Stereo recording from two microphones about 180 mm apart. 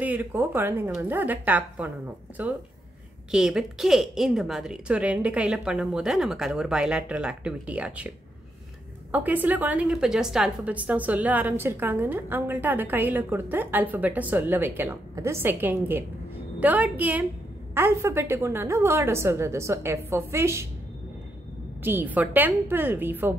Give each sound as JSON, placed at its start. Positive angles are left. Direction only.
{"t": 0.0, "sound": "a woman's voice", "side_deg": -10}
{"t": 3.3, "sound": "a woman's voice", "side_deg": -5}
{"t": 9.1, "sound": "a woman's voice", "side_deg": -10}
{"t": 21.8, "sound": "a woman's voice", "side_deg": -10}